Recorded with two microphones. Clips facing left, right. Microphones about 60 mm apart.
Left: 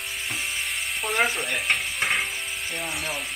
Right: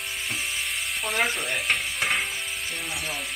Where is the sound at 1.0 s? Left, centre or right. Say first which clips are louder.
Left 2 dB; centre.